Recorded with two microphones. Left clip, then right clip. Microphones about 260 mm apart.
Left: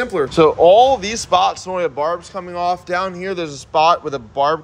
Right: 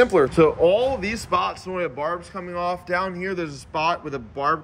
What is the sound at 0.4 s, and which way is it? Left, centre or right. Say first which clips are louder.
Speech: left 11 dB; centre.